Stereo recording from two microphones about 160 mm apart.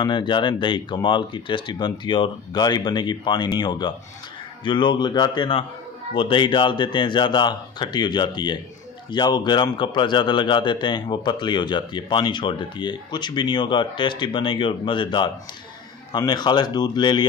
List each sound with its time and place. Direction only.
0.0 s speech: 30° left (ahead or behind)